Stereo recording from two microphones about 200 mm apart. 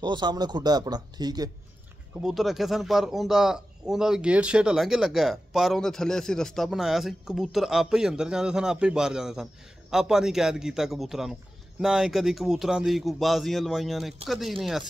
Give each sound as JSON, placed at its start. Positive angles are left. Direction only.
{"t": 0.0, "sound": "speech", "side_deg": -20}
{"t": 2.2, "sound": "a man's voice", "side_deg": 0}